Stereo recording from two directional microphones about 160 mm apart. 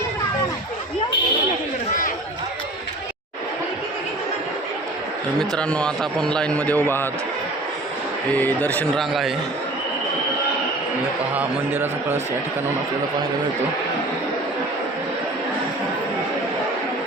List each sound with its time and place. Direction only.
5.4 s a man's voice: 5° left (ahead or behind)
8.4 s a man's voice: 10° left (ahead or behind)
11.3 s a man's voice: 10° right (ahead or behind)